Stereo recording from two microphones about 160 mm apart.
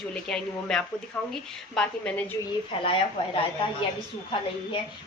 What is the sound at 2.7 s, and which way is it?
Speech, 35° left (ahead or behind).